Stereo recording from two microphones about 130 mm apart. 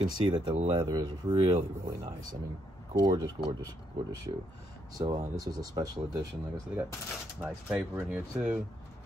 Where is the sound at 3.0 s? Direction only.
35° right (ahead or behind).